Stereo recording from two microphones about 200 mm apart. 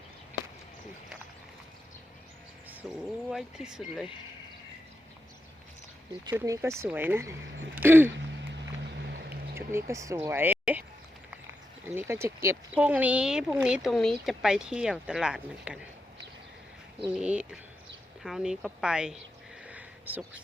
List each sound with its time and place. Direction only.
2.8 s speech: 5° right (ahead or behind)
6.3 s speech: 15° right (ahead or behind)
9.0 s boat: 55° right (ahead or behind)
9.6 s speech: 15° right (ahead or behind)
11.9 s speech: 10° right (ahead or behind)
17.2 s speech: 5° right (ahead or behind)
19.6 s a sound: 10° right (ahead or behind)